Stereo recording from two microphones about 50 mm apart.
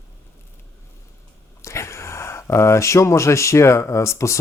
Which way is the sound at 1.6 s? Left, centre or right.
Left.